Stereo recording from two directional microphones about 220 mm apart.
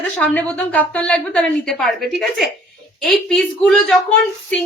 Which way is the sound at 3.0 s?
5° left (ahead or behind).